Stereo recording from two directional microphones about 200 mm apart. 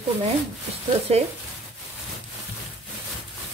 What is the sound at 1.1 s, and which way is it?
Speech, 30° right (ahead or behind).